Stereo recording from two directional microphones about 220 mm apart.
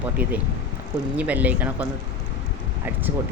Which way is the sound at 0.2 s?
5° right (ahead or behind).